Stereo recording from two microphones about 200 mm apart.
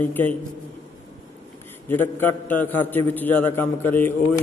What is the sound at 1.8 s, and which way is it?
A man's voice, 10° left (ahead or behind).